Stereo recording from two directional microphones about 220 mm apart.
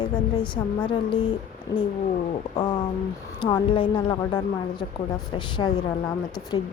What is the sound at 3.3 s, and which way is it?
A woman's voice, 20° left (ahead or behind).